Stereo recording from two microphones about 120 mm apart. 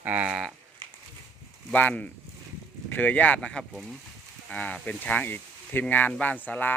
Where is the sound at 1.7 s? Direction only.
15° left (ahead or behind).